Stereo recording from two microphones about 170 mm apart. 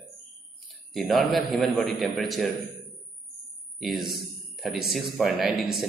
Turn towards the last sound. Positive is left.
turn(degrees=0)  # may be behind; listen again after turning